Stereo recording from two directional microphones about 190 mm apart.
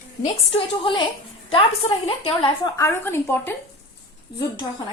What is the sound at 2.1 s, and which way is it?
Speech, 30° left (ahead or behind).